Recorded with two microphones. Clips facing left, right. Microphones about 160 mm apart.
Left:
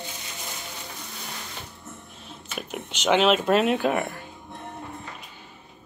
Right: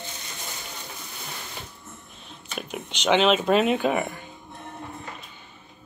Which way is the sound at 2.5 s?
5° left (ahead or behind).